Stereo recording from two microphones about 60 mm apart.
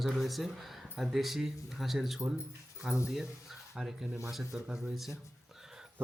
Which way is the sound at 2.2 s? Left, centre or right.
Right.